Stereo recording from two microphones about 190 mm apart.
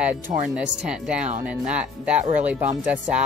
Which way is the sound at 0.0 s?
5° right (ahead or behind).